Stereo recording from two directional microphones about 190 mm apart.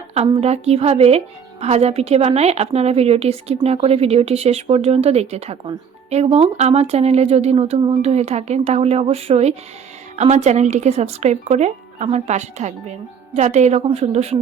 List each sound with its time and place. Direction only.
0.1 s a woman's voice: 30° right (ahead or behind)